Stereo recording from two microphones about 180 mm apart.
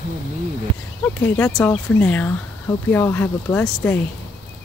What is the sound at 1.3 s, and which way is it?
Speech, 15° left (ahead or behind).